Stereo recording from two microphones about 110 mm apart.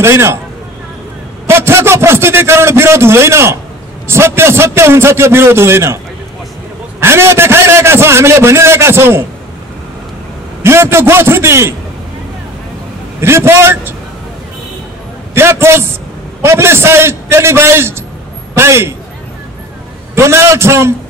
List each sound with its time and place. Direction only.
0.0 s a man's voice: 25° right (ahead or behind)
1.5 s a man's voice: 25° right (ahead or behind)
7.0 s a man's voice: 20° right (ahead or behind)
10.6 s a man's voice: 25° right (ahead or behind)
13.2 s a man's voice: 25° right (ahead or behind)
15.3 s a man's voice: 25° right (ahead or behind)
20.2 s a man's voice: 25° right (ahead or behind)